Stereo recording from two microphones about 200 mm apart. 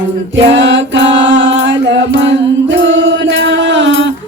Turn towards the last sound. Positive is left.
turn(degrees=-65)  # may be behind; listen again after turning